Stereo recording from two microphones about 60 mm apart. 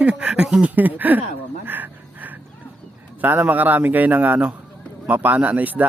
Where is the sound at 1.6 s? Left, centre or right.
Right.